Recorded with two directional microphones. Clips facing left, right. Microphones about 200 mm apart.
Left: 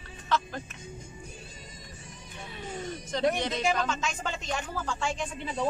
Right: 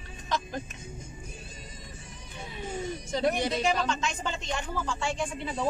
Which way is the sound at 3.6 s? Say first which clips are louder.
Right 1 dB; 5° left (ahead or behind).